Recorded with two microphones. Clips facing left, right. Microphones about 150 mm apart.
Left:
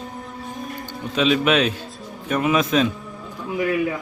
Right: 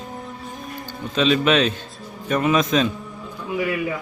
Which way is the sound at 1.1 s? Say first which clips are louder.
Even; 10° left (ahead or behind).